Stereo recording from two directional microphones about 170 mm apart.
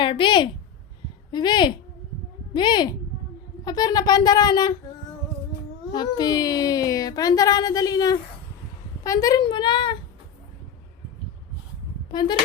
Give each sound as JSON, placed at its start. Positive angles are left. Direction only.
{"t": 0.0, "sound": "a woman's voice", "side_deg": 30}
{"t": 5.9, "sound": "speech", "side_deg": 25}